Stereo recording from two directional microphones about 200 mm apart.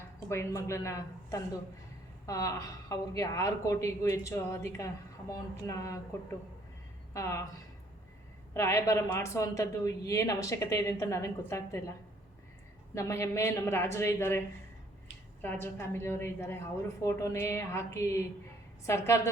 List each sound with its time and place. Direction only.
0.3 s a woman's voice: 15° left (ahead or behind)
7.1 s speech: 15° left (ahead or behind)
8.5 s a woman's voice: 15° left (ahead or behind)
12.9 s a woman's voice: 15° left (ahead or behind)